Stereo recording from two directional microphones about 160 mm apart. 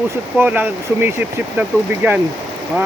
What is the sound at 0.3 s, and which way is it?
Speech, 10° right (ahead or behind).